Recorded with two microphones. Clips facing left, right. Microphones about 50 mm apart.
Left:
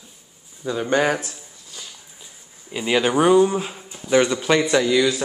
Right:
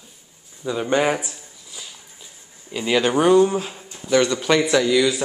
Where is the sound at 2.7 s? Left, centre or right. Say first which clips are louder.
Even; centre.